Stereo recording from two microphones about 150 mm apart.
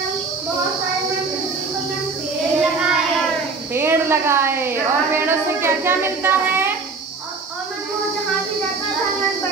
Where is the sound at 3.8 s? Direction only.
15° right (ahead or behind).